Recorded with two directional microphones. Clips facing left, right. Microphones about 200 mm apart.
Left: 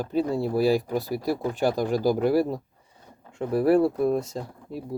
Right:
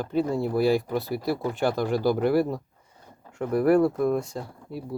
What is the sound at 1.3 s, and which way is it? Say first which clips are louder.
Speech: left 1 dB; 15° left (ahead or behind).